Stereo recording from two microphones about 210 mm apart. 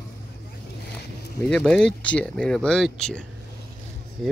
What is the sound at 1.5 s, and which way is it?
Speech, 5° left (ahead or behind).